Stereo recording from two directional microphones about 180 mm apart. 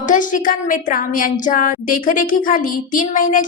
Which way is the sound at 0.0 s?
45° left (ahead or behind).